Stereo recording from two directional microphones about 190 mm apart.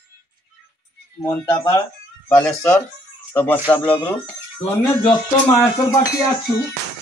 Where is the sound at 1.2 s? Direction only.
10° left (ahead or behind).